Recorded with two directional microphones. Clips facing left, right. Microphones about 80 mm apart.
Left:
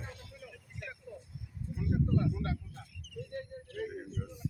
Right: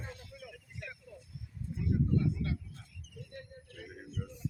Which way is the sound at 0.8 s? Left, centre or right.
Centre.